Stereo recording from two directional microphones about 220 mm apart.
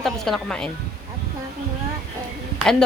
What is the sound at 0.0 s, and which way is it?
Speech, centre (ahead or behind).